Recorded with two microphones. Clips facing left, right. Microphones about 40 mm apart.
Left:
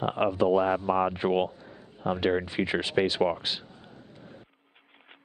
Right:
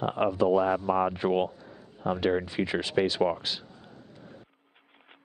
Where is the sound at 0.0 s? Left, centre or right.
Left.